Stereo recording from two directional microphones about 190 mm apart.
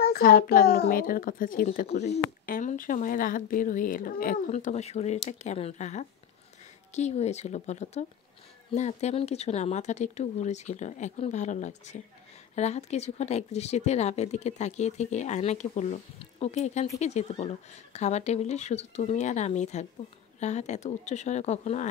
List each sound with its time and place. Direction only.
0.1 s speech: 50° left (ahead or behind)
1.9 s speech: 35° left (ahead or behind)
2.4 s speech: 50° left (ahead or behind)